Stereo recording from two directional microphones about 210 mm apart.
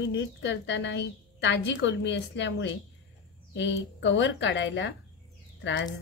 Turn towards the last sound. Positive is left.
turn(degrees=55)  # may be behind; listen again after turning